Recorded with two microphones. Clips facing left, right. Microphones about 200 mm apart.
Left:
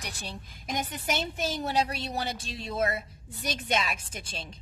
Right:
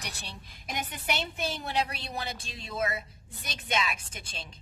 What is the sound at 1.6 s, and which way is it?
Speech, 40° left (ahead or behind).